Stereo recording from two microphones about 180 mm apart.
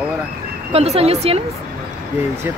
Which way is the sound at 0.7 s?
35° right (ahead or behind).